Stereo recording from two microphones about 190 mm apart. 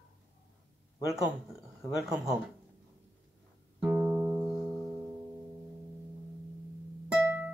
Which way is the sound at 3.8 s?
5° right (ahead or behind).